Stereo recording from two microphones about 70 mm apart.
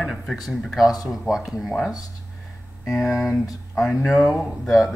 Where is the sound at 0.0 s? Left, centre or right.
Centre.